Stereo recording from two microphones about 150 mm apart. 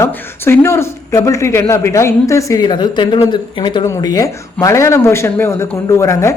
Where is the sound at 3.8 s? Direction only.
20° left (ahead or behind).